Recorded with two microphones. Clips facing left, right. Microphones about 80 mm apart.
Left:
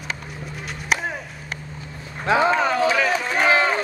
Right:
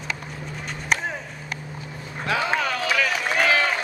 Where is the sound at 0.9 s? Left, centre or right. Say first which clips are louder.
Left 1 dB; centre.